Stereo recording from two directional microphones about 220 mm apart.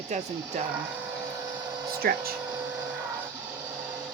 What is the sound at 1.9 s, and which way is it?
Speech, 45° right (ahead or behind).